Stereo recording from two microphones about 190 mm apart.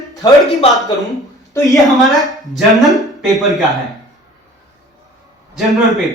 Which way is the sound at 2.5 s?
Centre (ahead or behind).